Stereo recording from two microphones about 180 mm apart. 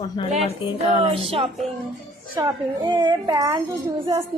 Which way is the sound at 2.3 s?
25° right (ahead or behind).